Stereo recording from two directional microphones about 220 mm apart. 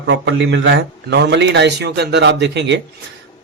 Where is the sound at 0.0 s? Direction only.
55° right (ahead or behind).